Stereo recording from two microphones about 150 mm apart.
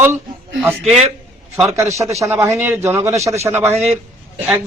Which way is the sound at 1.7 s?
20° right (ahead or behind).